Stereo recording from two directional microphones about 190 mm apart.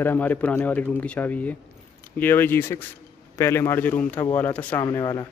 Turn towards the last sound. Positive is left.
turn(degrees=20)  # may be behind; listen again after turning